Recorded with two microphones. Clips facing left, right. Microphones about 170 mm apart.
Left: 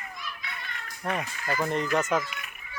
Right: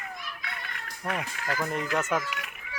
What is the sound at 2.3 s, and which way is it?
Children playing, 90° right.